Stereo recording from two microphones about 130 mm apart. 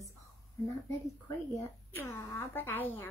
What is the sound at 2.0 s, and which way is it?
A woman's voice, 20° left (ahead or behind).